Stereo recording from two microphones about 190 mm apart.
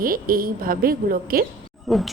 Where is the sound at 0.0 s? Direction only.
50° right (ahead or behind).